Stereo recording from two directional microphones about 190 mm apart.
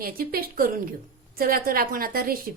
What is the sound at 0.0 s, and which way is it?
A woman's voice, 50° right (ahead or behind).